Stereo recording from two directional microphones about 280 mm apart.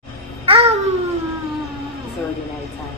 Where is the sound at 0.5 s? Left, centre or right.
Right.